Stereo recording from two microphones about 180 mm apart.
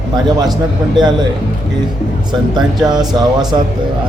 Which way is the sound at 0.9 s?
25° right (ahead or behind).